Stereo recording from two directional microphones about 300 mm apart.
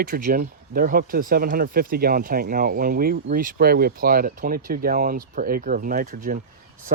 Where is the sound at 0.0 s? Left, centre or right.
Right.